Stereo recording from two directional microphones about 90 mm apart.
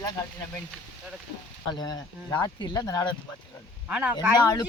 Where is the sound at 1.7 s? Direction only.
50° left (ahead or behind).